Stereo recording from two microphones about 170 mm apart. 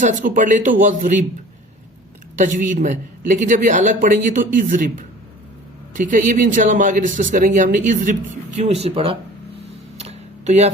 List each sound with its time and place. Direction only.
0.0 s speech: 50° right (ahead or behind)
2.4 s speech: 50° right (ahead or behind)
10.0 s a sound: 40° right (ahead or behind)